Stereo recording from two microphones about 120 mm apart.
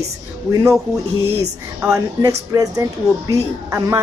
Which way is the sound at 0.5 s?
25° right (ahead or behind).